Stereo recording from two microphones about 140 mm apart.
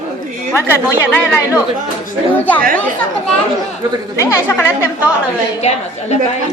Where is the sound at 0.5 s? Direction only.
15° left (ahead or behind).